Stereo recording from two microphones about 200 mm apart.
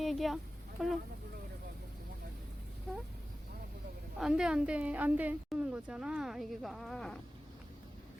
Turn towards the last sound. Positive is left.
turn(degrees=0)  # may be behind; listen again after turning